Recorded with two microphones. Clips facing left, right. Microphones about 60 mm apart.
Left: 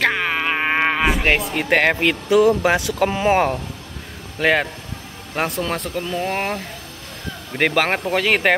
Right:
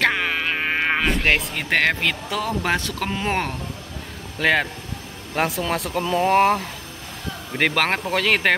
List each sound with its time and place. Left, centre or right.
0.0 s insect: centre
1.0 s speech: centre